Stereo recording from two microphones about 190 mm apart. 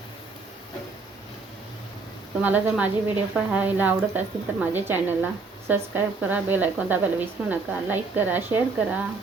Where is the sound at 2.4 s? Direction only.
10° right (ahead or behind).